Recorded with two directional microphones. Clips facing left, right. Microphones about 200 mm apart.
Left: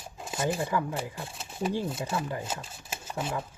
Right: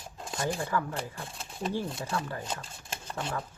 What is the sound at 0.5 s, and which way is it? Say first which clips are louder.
Speech: left 2 dB; 15° left (ahead or behind).